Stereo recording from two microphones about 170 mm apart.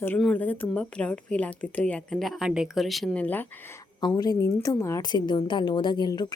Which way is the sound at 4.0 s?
25° left (ahead or behind).